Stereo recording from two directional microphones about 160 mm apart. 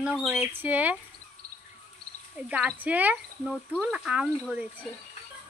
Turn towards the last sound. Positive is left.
turn(degrees=-5)  # may be behind; listen again after turning